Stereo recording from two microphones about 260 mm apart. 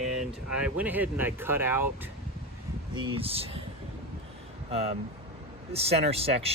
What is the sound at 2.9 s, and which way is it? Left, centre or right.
Speech, centre.